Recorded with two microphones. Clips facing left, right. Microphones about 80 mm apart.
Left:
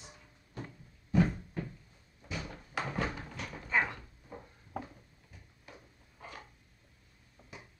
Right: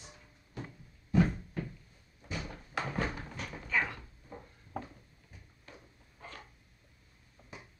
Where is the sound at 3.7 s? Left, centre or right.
Left.